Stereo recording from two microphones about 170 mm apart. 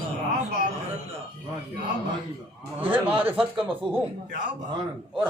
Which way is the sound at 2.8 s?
10° right (ahead or behind).